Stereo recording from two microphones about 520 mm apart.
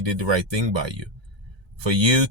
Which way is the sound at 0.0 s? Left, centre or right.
Right.